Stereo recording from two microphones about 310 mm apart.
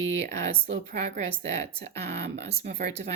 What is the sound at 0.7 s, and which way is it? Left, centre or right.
Speech, right.